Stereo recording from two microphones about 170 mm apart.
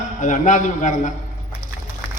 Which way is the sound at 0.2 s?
50° left (ahead or behind).